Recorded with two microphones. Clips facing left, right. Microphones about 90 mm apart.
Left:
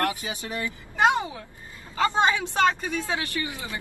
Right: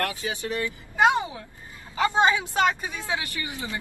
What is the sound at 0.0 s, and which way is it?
Speech, 20° left (ahead or behind).